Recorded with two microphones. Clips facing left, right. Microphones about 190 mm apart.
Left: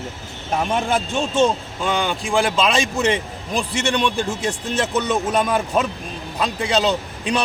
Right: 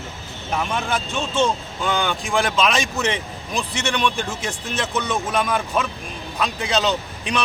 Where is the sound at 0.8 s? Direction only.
25° left (ahead or behind).